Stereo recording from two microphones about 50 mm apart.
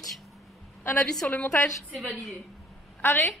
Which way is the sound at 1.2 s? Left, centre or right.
Left.